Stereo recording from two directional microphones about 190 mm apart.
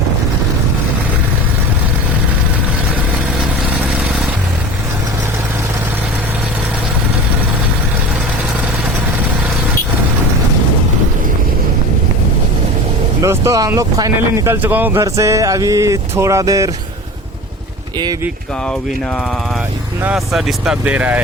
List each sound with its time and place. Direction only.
13.2 s speech: 15° right (ahead or behind)
18.0 s speech: 20° right (ahead or behind)
20.0 s speech: 5° right (ahead or behind)